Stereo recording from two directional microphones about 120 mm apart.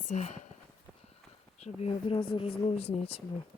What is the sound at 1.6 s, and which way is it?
Speech, 65° left (ahead or behind).